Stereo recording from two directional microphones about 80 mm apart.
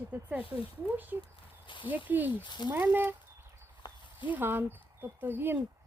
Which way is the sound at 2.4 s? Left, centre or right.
Left.